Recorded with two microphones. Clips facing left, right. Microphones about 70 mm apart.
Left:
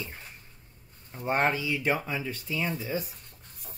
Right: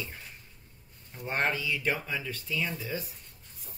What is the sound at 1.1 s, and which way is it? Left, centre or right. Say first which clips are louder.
Speech: left 6 dB; left.